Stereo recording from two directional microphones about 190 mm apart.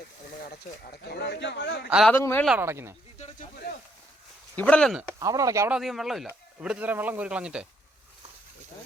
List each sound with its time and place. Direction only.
0.9 s a man's voice: 60° left (ahead or behind)
1.9 s speech: 5° right (ahead or behind)
2.1 s speech: 15° left (ahead or behind)
2.6 s speech: 15° right (ahead or behind)
4.5 s speech: 5° left (ahead or behind)
5.0 s speech: 15° right (ahead or behind)
5.7 s speech: centre (ahead or behind)